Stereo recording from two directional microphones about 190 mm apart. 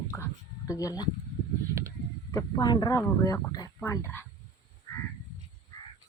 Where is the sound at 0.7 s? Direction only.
20° left (ahead or behind).